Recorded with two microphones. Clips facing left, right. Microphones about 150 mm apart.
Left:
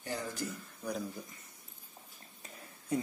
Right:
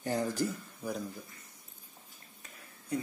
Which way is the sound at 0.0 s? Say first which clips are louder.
Right 7 dB; 40° right (ahead or behind).